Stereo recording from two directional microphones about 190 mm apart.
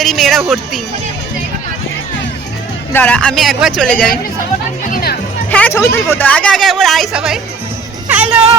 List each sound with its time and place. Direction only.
0.0 s speech: centre (ahead or behind)
2.9 s speech: 10° left (ahead or behind)
4.9 s music: 50° left (ahead or behind)
5.5 s speech: 10° left (ahead or behind)
8.0 s music: 5° right (ahead or behind)